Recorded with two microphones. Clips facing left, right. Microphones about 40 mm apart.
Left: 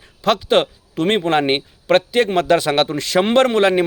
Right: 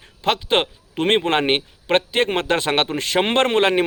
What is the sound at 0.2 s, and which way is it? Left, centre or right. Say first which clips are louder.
A man's voice: left 4 dB; right.